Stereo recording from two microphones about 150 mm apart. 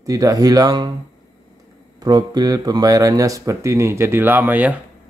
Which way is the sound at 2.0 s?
25° right (ahead or behind).